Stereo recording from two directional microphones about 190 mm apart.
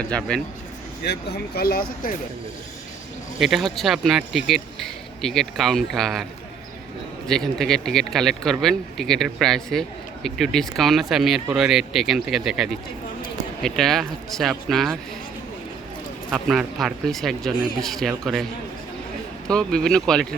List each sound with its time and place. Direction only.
0.1 s speech: 5° left (ahead or behind)
1.0 s speech: 60° left (ahead or behind)
3.3 s speech: centre (ahead or behind)
7.3 s speech: centre (ahead or behind)
16.3 s speech: centre (ahead or behind)
19.5 s speech: 5° left (ahead or behind)